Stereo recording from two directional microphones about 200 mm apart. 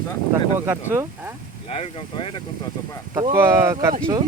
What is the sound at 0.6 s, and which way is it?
Speech, 10° right (ahead or behind).